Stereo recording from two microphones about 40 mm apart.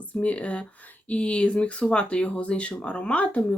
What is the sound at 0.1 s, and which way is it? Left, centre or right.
Speech, left.